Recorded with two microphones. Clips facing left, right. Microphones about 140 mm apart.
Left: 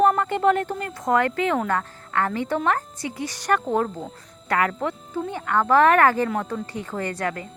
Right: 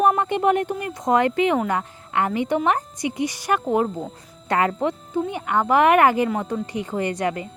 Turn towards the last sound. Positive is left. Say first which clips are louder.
# right 3 dB
turn(degrees=-20)  # may be behind; listen again after turning